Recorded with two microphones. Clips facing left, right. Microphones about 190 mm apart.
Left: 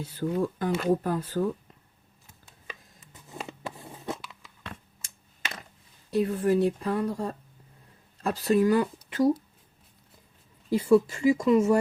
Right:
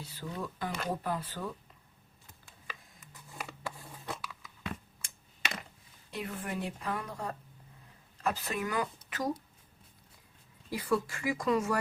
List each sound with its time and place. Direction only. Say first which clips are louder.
0.0 s speech: left 12 dB; 50° left (ahead or behind)
2.6 s biting: left 3 dB; 25° left (ahead or behind)
6.1 s speech: left 14 dB; 35° left (ahead or behind)
10.8 s speech: left 11 dB; 25° left (ahead or behind)